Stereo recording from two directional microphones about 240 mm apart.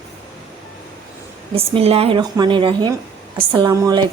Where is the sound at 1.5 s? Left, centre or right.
Right.